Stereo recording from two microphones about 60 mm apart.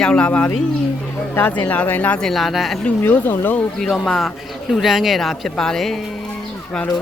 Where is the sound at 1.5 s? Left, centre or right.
Left.